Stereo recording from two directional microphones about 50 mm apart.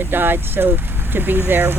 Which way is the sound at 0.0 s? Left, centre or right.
Right.